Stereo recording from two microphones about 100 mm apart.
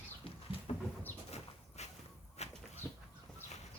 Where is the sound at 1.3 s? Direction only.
90° left.